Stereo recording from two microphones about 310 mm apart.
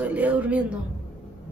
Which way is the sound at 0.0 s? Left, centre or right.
Centre.